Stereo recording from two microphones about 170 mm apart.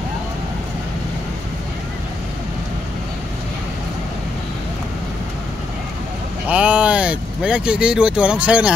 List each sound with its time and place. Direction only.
6.5 s speech: 5° right (ahead or behind)